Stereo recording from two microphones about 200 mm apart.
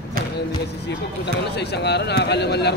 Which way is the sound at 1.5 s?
55° left (ahead or behind).